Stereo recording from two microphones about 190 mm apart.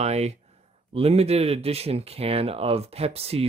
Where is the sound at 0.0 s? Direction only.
35° right (ahead or behind).